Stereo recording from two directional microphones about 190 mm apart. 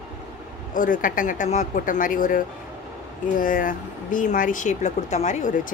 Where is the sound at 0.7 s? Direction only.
45° left (ahead or behind).